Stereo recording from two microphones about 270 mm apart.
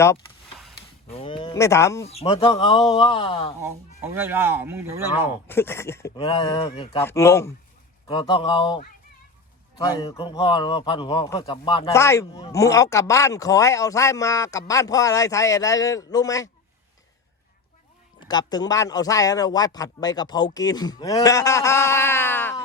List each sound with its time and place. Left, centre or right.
1.1 s a man's voice: centre
2.0 s speech: left
3.6 s speech: centre
5.5 s a man's voice: centre
18.2 s a man's voice: centre